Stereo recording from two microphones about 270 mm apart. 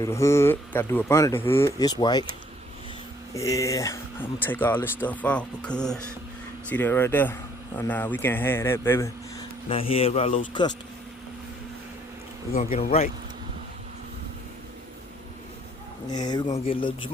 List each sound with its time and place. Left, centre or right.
0.0 s speech: centre
3.3 s speech: centre
9.6 s speech: left
12.7 s speech: left
16.0 s speech: centre